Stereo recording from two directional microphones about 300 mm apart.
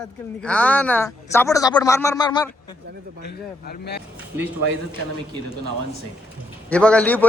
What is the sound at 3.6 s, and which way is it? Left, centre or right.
Speech, left.